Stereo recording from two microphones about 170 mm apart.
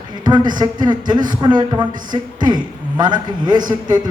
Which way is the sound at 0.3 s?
25° right (ahead or behind).